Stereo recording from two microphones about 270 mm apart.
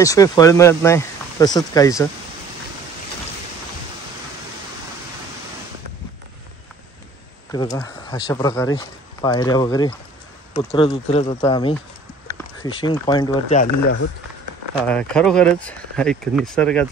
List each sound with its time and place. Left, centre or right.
0.0 s speech: centre
7.5 s speech: centre
14.8 s speech: centre